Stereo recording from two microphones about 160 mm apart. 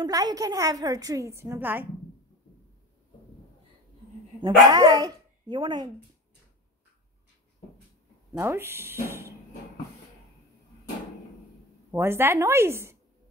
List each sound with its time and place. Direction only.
0.0 s a woman's voice: 25° right (ahead or behind)
4.6 s speech: 25° right (ahead or behind)
8.4 s a woman's voice: 15° right (ahead or behind)
11.9 s a woman's voice: 15° right (ahead or behind)